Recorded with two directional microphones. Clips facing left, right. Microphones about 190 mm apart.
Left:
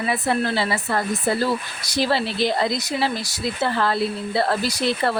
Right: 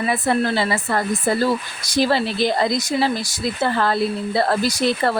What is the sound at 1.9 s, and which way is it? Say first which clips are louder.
Speech: right 3 dB; 45° right (ahead or behind).